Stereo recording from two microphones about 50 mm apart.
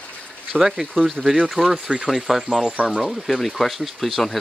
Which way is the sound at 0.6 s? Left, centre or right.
Centre.